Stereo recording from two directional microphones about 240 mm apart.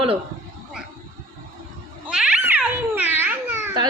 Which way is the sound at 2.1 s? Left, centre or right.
Centre.